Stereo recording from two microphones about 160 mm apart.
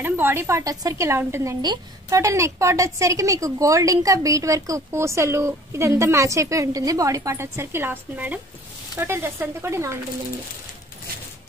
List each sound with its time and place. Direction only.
0.0 s a woman's voice: 15° right (ahead or behind)